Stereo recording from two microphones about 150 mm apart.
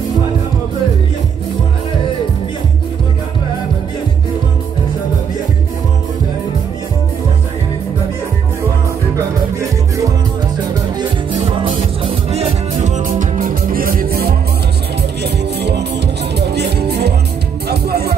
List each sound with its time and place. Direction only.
9.6 s music: 20° right (ahead or behind)
12.0 s music: 40° right (ahead or behind); by 18.1 s 90° right